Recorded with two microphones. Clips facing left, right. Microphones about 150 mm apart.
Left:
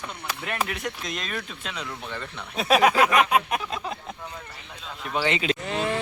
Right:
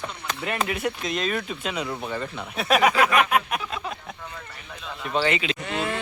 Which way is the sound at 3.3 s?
20° left (ahead or behind).